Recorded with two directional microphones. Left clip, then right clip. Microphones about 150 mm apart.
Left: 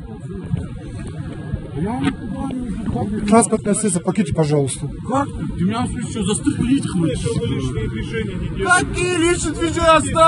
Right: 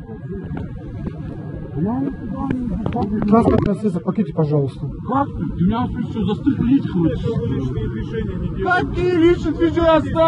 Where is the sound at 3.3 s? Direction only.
90° left.